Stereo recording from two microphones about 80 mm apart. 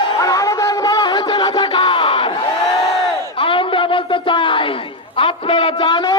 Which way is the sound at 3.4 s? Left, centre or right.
Left.